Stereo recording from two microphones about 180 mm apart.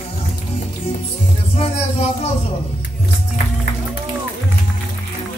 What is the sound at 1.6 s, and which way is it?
Music, 35° left (ahead or behind).